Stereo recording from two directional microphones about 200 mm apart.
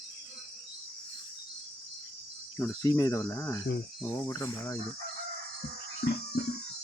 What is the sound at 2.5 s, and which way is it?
Speech, 15° left (ahead or behind).